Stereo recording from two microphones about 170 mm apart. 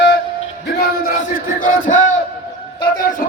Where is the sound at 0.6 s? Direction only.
70° left (ahead or behind); by 3.3 s 50° left (ahead or behind).